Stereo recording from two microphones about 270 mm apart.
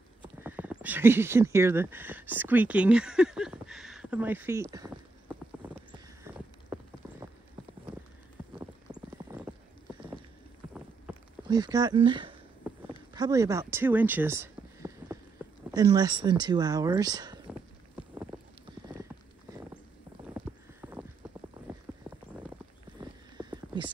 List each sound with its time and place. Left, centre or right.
0.2 s horse: centre
11.4 s speech: centre
12.6 s a sound: centre
15.7 s speech: centre
18.1 s clip-clop: centre
20.3 s clip-clop: centre
23.0 s horse: centre
23.3 s a sound: centre